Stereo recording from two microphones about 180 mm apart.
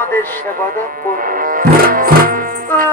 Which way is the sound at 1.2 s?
50° right (ahead or behind).